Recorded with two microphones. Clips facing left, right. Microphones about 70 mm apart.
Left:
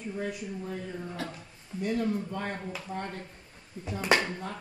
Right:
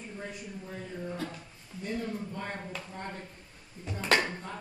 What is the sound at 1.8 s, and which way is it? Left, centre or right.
Speech, left.